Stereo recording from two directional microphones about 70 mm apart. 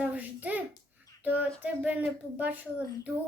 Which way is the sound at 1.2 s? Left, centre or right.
Right.